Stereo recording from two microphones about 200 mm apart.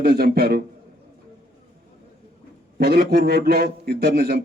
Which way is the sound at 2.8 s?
50° right (ahead or behind).